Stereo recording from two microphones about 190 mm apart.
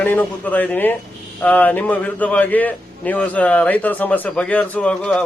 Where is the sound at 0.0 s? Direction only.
10° left (ahead or behind).